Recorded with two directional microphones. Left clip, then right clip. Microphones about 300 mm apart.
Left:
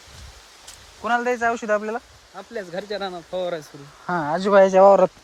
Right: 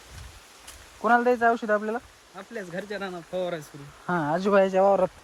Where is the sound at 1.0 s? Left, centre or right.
Centre; by 5.1 s left.